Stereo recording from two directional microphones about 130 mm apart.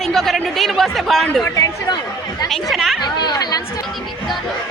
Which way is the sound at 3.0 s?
35° left (ahead or behind).